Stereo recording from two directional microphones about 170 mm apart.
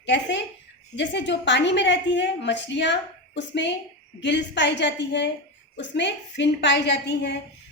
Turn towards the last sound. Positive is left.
turn(degrees=90)